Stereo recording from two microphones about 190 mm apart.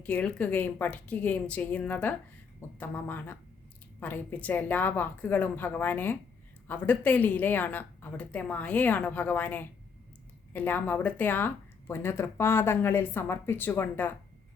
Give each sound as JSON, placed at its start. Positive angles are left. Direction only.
{"t": 0.0, "sound": "speech", "side_deg": 5}